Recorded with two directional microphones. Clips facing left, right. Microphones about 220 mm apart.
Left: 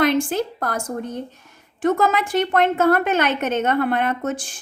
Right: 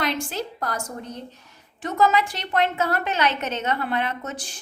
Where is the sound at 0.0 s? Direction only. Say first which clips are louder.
Left 8 dB; 50° left (ahead or behind).